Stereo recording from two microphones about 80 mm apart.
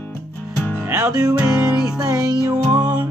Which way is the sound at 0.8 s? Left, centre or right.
Right.